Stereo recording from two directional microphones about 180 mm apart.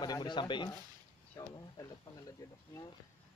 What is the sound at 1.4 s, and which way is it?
Speech, 15° left (ahead or behind).